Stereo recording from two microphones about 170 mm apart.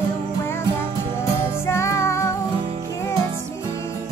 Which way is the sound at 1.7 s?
15° left (ahead or behind).